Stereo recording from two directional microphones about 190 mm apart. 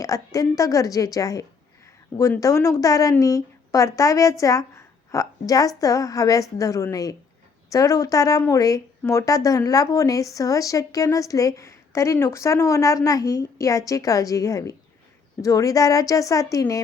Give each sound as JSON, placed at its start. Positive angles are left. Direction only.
{"t": 0.0, "sound": "a woman's voice", "side_deg": 15}